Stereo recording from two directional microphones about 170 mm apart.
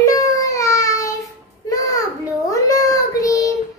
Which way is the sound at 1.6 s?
20° left (ahead or behind).